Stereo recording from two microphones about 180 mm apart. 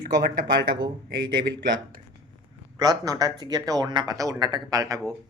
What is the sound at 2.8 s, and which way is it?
Speech, 20° right (ahead or behind).